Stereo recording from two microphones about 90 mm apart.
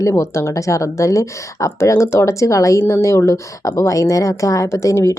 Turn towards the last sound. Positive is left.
turn(degrees=35)  # may be behind; listen again after turning